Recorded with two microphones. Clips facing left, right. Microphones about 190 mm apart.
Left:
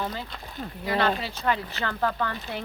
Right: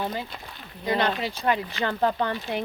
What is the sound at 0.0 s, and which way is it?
Speech, 20° right (ahead or behind).